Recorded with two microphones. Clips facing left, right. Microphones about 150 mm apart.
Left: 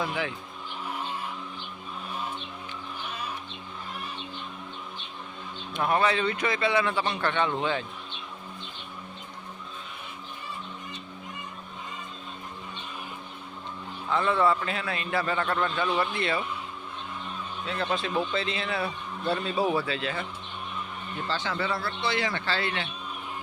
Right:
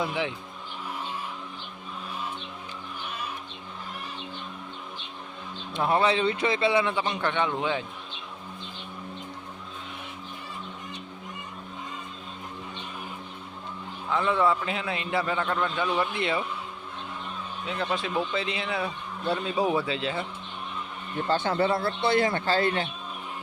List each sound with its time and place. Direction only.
0.0 s speech: 20° right (ahead or behind)
5.7 s speech: 25° right (ahead or behind); by 7.9 s 10° right (ahead or behind)
14.1 s speech: 10° right (ahead or behind)
15.2 s speech: 10° right (ahead or behind)
17.7 s speech: 10° right (ahead or behind)
21.2 s speech: 50° right (ahead or behind)
21.5 s speech: 25° right (ahead or behind)
22.0 s speech: 50° right (ahead or behind)